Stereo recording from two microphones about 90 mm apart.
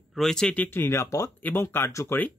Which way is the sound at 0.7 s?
25° left (ahead or behind).